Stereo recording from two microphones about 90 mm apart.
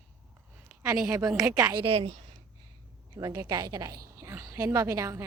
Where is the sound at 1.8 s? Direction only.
90° right.